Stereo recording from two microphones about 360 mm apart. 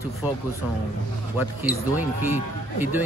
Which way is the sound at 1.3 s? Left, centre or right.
Centre.